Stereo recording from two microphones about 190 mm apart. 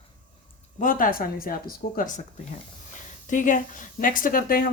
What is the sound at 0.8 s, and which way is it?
Speech, 45° left (ahead or behind).